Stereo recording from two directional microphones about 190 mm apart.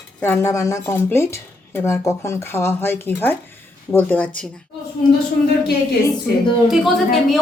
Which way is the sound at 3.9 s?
10° left (ahead or behind).